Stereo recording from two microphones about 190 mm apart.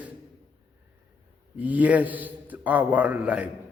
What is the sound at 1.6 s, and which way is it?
A man's voice, 10° right (ahead or behind).